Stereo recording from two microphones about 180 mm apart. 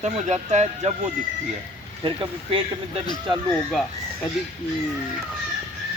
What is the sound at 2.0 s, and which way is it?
Speech, 30° right (ahead or behind).